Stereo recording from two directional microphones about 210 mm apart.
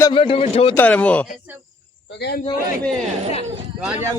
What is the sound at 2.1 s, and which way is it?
Speech, 55° left (ahead or behind).